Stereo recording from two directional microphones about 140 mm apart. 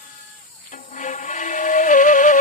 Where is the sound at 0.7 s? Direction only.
70° left (ahead or behind).